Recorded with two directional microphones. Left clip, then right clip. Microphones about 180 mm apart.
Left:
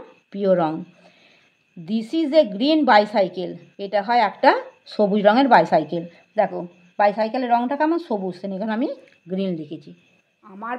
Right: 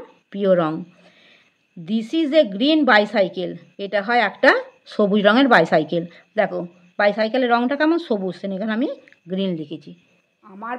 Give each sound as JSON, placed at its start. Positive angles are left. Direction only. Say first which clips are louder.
{"t": 0.3, "sound": "a woman's voice", "louder": "right 1 dB", "side_deg": -15}
{"t": 10.4, "sound": "speech", "louder": "even", "side_deg": 0}